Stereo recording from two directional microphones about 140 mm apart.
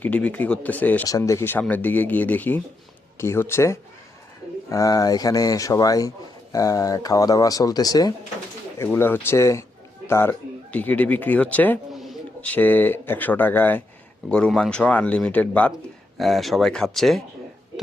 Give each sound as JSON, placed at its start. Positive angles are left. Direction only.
{"t": 0.0, "sound": "speech", "side_deg": 10}
{"t": 1.0, "sound": "speech", "side_deg": 25}
{"t": 8.8, "sound": "speech", "side_deg": 15}
{"t": 16.1, "sound": "speech", "side_deg": 0}